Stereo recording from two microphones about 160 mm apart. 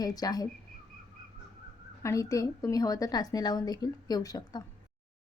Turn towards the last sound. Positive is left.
turn(degrees=25)  # may be behind; listen again after turning